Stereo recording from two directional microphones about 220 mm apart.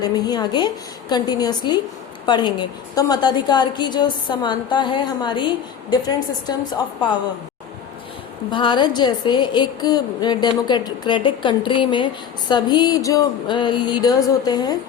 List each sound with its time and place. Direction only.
0.0 s a woman's voice: 20° left (ahead or behind)
8.4 s a woman's voice: 20° left (ahead or behind)